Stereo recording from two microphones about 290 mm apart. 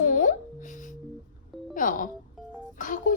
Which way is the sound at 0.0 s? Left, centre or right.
Left.